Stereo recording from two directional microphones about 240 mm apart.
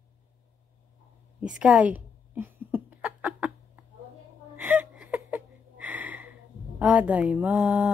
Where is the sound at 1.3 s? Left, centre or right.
Centre.